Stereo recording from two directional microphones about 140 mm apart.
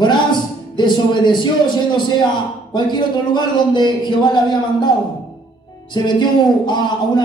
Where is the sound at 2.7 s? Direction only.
30° left (ahead or behind).